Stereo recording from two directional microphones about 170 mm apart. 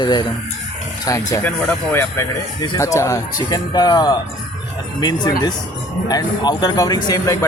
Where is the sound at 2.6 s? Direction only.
20° left (ahead or behind).